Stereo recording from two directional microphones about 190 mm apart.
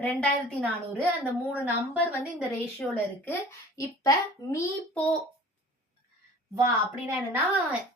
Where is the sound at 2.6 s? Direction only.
5° left (ahead or behind).